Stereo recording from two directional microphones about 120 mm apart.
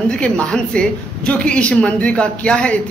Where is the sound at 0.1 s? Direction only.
10° left (ahead or behind).